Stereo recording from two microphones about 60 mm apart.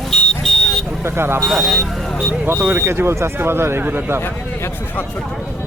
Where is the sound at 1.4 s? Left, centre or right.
Centre.